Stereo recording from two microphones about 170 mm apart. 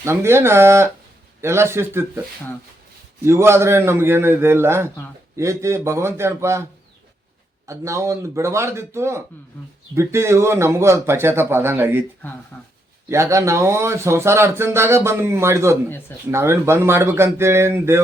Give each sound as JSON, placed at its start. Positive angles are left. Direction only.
{"t": 0.0, "sound": "speech", "side_deg": -15}
{"t": 3.2, "sound": "speech", "side_deg": -15}
{"t": 7.7, "sound": "speech", "side_deg": -15}
{"t": 12.5, "sound": "speech", "side_deg": 15}
{"t": 13.1, "sound": "speech", "side_deg": -15}